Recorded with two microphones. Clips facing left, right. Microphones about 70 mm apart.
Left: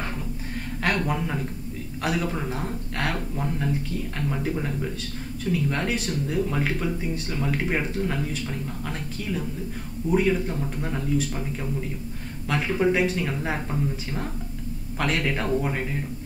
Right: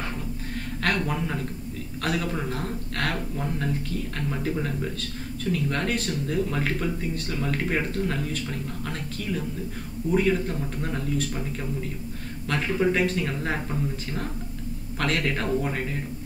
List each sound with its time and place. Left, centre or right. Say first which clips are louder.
0.8 s speech: left 1 dB; centre
10.1 s speech: left 1 dB; centre
12.4 s speech: left 1 dB; centre